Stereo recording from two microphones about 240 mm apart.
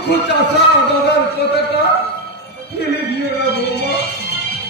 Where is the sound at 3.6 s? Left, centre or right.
Left.